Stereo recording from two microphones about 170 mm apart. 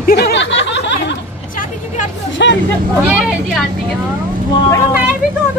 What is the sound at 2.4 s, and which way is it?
Speech, 90° left.